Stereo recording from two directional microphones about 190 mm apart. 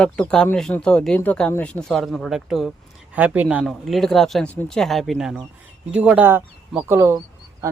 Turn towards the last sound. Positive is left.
turn(degrees=-15)  # may be behind; listen again after turning